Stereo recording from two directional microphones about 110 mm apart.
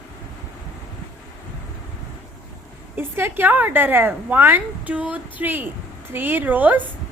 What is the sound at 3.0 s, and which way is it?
A woman's voice, 20° right (ahead or behind).